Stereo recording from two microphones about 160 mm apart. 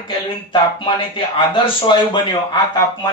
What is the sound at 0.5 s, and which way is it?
Speech, 30° left (ahead or behind).